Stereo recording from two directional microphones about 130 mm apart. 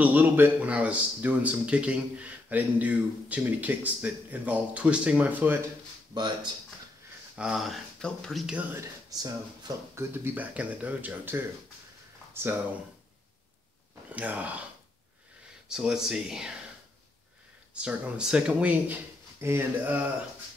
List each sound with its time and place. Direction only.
0.0 s speech: 15° right (ahead or behind)
6.1 s speech: 35° right (ahead or behind)
7.3 s speech: 5° right (ahead or behind)
9.1 s speech: 30° right (ahead or behind)
10.1 s speech: 15° right (ahead or behind)
14.1 s speech: 10° right (ahead or behind)
15.7 s speech: 5° right (ahead or behind)
17.7 s speech: 10° right (ahead or behind)